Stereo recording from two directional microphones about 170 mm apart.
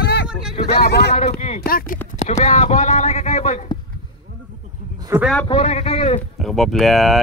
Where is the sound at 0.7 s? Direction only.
70° left (ahead or behind).